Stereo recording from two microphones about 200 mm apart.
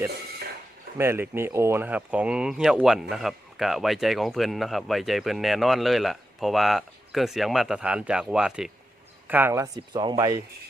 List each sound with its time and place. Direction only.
0.9 s speech: 10° right (ahead or behind)